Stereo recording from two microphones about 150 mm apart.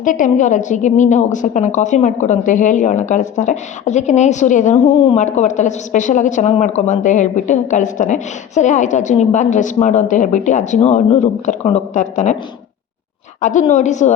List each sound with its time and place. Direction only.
0.0 s a woman's voice: 60° left (ahead or behind)
4.7 s a woman's voice: 35° left (ahead or behind)
5.1 s a woman's voice: 50° left (ahead or behind)
13.4 s speech: 55° left (ahead or behind)